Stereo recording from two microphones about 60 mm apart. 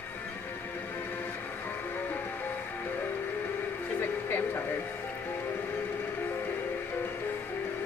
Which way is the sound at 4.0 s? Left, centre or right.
Left.